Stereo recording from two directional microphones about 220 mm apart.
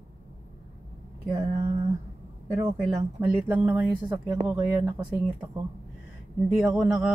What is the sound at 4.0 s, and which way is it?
Speech, 20° right (ahead or behind).